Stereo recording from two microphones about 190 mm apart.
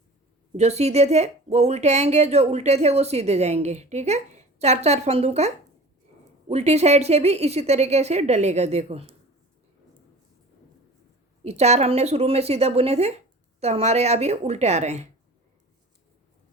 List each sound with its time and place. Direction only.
0.5 s speech: 35° right (ahead or behind)
11.4 s speech: 35° right (ahead or behind)